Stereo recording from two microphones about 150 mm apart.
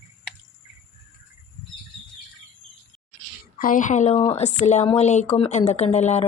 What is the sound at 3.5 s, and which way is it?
Speech, 65° left (ahead or behind).